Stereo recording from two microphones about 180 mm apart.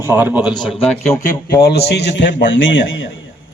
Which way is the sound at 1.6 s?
60° left (ahead or behind).